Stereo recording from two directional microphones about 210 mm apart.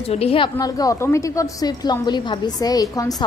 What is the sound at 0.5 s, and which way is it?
A woman's voice, 15° left (ahead or behind).